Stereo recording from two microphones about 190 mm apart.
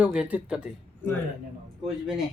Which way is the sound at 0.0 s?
5° right (ahead or behind).